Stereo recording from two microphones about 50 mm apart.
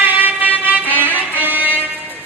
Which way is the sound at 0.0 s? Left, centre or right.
Right.